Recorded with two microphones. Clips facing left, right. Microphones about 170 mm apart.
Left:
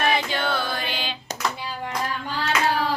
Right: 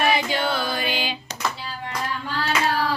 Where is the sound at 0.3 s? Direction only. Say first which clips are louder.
Right 2 dB; 10° right (ahead or behind).